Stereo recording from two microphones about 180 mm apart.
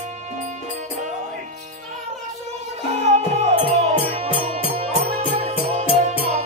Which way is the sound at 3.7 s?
35° right (ahead or behind).